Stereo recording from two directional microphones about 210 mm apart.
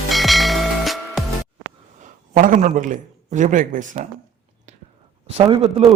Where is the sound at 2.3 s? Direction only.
35° right (ahead or behind).